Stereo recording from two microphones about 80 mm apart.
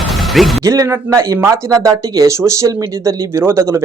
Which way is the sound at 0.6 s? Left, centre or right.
Right.